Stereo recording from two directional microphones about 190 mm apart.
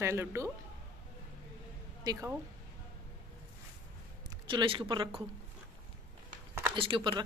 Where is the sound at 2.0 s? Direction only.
15° right (ahead or behind).